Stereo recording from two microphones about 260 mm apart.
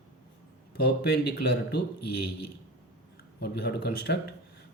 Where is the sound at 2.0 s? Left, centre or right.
Left.